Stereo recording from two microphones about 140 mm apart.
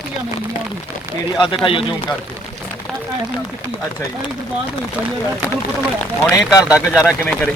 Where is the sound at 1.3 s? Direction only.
35° left (ahead or behind).